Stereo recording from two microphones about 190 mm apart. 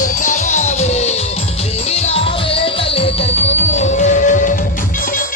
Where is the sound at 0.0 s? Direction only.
40° left (ahead or behind).